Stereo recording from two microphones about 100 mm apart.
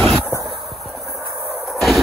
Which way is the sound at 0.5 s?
Centre (ahead or behind).